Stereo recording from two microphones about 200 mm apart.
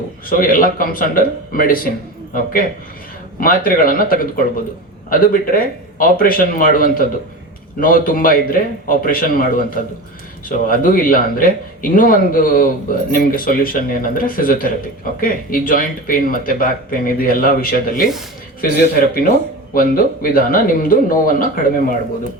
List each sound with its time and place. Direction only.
0.3 s speech: 45° left (ahead or behind)